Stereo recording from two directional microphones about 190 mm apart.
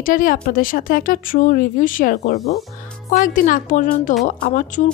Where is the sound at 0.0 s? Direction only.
45° left (ahead or behind).